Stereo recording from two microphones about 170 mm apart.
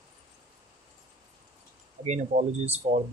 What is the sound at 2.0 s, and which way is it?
Speech, 40° right (ahead or behind).